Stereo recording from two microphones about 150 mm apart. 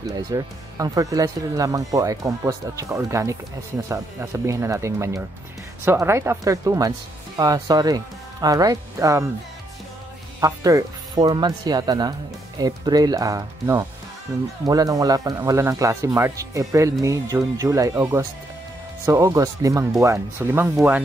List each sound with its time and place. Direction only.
0.0 s speech: 25° right (ahead or behind)
10.4 s speech: 25° right (ahead or behind)